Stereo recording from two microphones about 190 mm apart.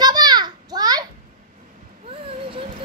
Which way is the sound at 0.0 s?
20° right (ahead or behind).